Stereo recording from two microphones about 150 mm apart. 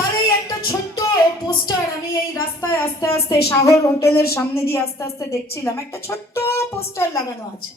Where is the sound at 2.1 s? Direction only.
25° left (ahead or behind).